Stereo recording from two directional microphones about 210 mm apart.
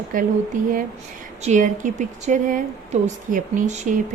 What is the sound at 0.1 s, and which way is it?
A woman's voice, 40° right (ahead or behind).